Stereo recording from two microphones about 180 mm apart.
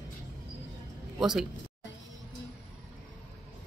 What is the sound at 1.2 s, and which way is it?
Speech, 5° right (ahead or behind).